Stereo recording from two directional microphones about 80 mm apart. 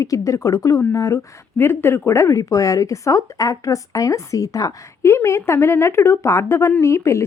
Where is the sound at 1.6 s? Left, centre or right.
Left.